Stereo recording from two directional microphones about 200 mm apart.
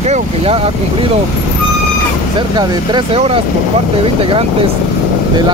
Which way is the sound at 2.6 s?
20° right (ahead or behind).